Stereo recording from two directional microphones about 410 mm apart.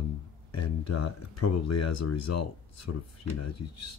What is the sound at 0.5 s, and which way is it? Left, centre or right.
Speech, left.